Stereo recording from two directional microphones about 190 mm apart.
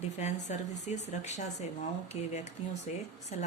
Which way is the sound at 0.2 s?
35° left (ahead or behind).